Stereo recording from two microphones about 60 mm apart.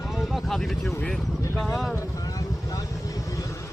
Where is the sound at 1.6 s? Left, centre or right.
Centre.